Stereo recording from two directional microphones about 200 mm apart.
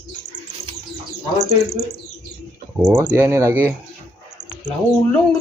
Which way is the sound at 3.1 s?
15° right (ahead or behind).